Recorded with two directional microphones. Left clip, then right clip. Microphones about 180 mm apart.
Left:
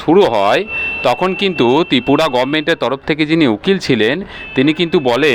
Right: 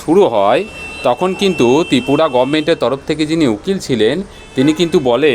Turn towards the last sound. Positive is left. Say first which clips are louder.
# right 1 dB
turn(degrees=5)  # may be behind; listen again after turning